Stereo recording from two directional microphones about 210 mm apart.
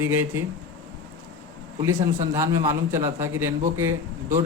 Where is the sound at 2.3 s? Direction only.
15° right (ahead or behind).